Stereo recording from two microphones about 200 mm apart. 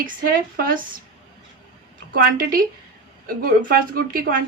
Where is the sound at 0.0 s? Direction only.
45° right (ahead or behind).